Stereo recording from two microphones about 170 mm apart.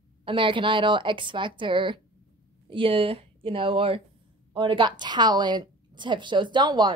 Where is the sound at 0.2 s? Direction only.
30° right (ahead or behind).